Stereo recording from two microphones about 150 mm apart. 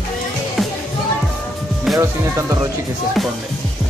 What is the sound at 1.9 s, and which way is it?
Music, centre (ahead or behind).